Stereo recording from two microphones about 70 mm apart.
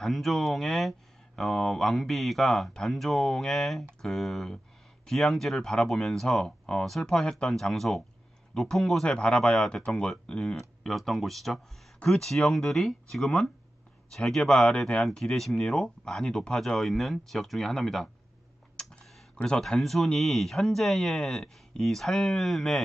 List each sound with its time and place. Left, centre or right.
0.0 s speech: centre
18.8 s tick: centre
19.3 s speech: centre
19.6 s speech: centre